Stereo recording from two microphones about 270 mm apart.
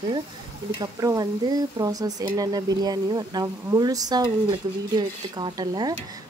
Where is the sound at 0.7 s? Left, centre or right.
Centre.